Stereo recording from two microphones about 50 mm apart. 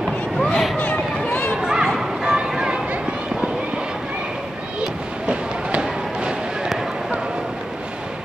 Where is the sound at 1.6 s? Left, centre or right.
Centre.